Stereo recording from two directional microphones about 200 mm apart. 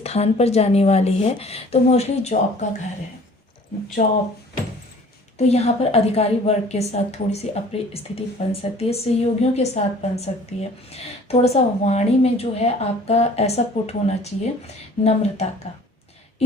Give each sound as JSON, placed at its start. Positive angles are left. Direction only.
{"t": 0.0, "sound": "a woman's voice", "side_deg": 30}
{"t": 4.0, "sound": "a woman's voice", "side_deg": 35}
{"t": 5.4, "sound": "a woman's voice", "side_deg": 30}